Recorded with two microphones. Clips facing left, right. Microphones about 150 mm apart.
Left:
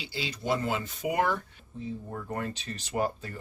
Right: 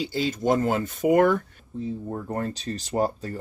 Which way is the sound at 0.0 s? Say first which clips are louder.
Right 10 dB; 45° right (ahead or behind).